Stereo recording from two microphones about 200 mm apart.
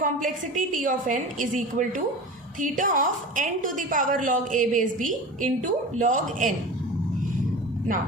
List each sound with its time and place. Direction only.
0.0 s a woman's voice: 40° right (ahead or behind)